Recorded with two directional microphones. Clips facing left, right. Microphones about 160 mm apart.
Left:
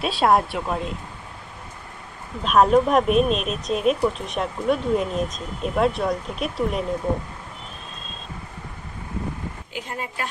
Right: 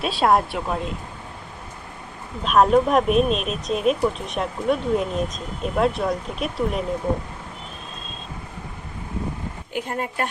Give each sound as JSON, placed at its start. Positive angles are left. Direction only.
{"t": 0.0, "sound": "speech", "side_deg": 0}
{"t": 2.4, "sound": "speech", "side_deg": 0}
{"t": 9.7, "sound": "speech", "side_deg": -50}